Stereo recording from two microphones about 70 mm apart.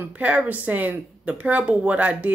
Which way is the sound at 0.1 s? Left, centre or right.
Centre.